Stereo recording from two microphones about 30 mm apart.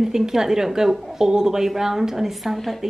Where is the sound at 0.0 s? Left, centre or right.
Centre.